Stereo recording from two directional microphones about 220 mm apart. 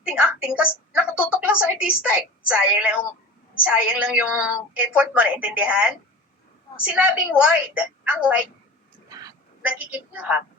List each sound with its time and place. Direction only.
0.0 s a woman's voice: 5° right (ahead or behind)
9.0 s whispering: 15° right (ahead or behind)
9.6 s a woman's voice: 5° right (ahead or behind)